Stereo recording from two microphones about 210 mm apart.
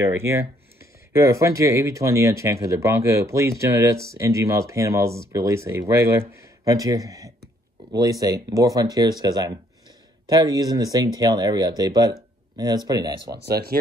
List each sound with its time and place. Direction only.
0.0 s speech: 10° right (ahead or behind)
13.3 s speech: 50° right (ahead or behind)